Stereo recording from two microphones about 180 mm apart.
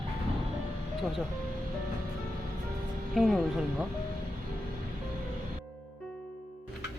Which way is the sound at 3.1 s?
Centre (ahead or behind).